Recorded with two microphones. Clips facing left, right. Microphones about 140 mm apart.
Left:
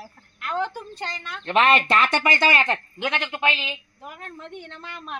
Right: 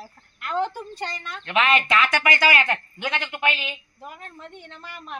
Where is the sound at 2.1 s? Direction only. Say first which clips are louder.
Even; 30° left (ahead or behind).